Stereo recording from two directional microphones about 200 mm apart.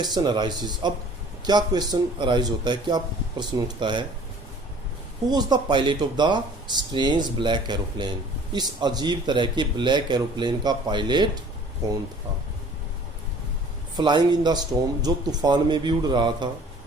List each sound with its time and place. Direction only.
0.0 s speech: 20° right (ahead or behind)
5.3 s speech: 20° right (ahead or behind)
13.9 s speech: 20° right (ahead or behind)